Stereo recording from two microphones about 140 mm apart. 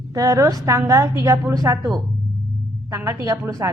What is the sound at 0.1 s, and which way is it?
A woman's voice, 25° right (ahead or behind).